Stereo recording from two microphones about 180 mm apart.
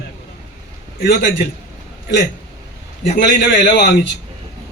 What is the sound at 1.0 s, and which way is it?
Speech, 70° left (ahead or behind).